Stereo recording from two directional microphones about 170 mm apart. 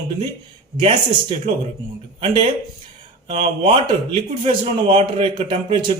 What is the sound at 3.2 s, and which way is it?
A man's voice, 35° right (ahead or behind).